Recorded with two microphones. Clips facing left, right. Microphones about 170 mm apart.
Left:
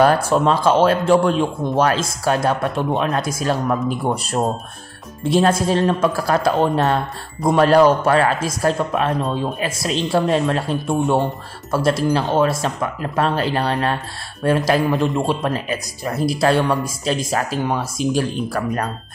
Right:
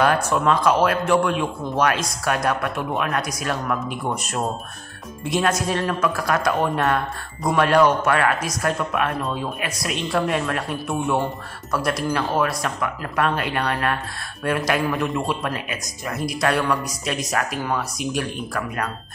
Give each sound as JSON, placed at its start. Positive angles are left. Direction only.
{"t": 0.0, "sound": "a man's voice", "side_deg": 30}